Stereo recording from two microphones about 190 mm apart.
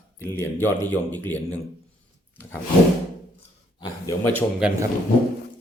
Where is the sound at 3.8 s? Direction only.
20° left (ahead or behind).